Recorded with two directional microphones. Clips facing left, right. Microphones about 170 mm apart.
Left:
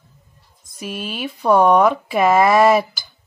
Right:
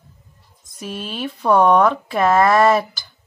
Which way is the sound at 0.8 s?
5° left (ahead or behind).